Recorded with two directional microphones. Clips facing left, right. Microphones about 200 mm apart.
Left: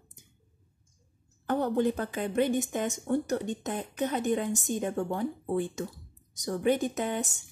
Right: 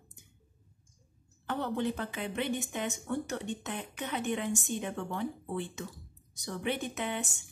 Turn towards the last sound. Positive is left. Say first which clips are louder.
# left 4 dB
turn(degrees=40)  # may be behind; listen again after turning